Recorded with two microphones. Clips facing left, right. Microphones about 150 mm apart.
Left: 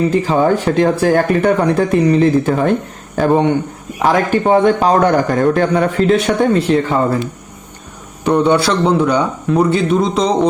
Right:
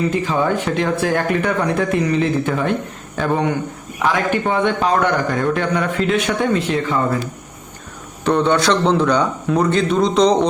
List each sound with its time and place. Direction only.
0.1 s a man's voice: 35° left (ahead or behind)
8.2 s a man's voice: 10° left (ahead or behind)